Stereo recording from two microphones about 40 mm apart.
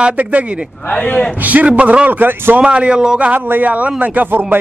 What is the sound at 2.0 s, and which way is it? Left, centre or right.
Speech, right.